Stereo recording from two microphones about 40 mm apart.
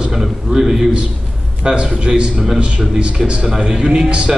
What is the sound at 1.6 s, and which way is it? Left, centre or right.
A man's voice, right.